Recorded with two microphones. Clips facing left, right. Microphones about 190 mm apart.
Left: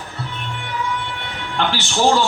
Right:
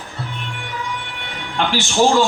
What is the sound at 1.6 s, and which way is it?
Speech, 15° right (ahead or behind).